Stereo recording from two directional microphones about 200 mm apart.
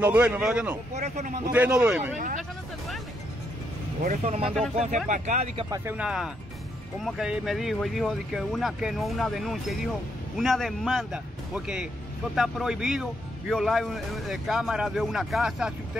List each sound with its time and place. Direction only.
0.0 s a man's voice: 10° right (ahead or behind)
0.9 s speech: 35° right (ahead or behind)
1.5 s speech: 5° right (ahead or behind)
2.1 s speech: 40° right (ahead or behind)
4.0 s speech: 40° right (ahead or behind)
4.5 s a man's voice: centre (ahead or behind)
5.0 s speech: 35° right (ahead or behind)
5.7 s a man's voice: 10° right (ahead or behind)